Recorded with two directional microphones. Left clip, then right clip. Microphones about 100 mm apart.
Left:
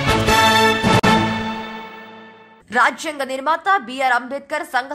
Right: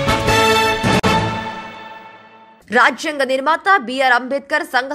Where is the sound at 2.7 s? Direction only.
25° right (ahead or behind).